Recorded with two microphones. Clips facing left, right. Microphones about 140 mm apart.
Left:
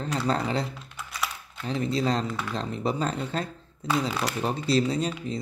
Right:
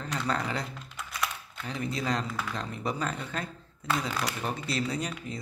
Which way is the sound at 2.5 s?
30° left (ahead or behind).